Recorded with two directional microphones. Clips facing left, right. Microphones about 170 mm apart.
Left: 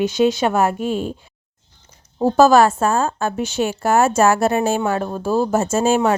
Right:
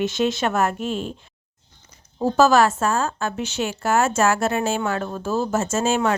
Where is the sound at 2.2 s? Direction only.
30° left (ahead or behind).